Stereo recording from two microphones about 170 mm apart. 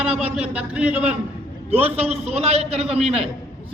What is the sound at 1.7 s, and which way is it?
A man's voice, 35° right (ahead or behind).